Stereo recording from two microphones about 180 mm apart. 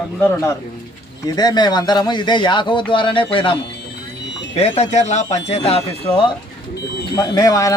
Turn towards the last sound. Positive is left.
turn(degrees=20)  # may be behind; listen again after turning